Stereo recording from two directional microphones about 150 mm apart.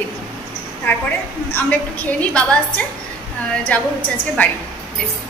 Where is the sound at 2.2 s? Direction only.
10° left (ahead or behind).